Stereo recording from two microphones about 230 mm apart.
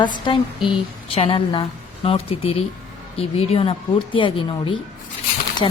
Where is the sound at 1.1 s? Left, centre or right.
Left.